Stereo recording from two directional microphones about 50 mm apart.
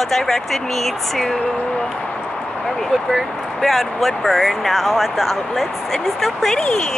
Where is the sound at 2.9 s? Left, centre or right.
Centre.